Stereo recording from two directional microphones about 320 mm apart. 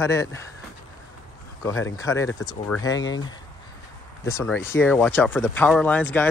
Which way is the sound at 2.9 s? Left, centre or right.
Left.